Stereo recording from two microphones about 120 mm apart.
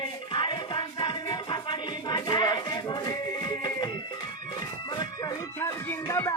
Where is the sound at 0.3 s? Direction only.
40° left (ahead or behind).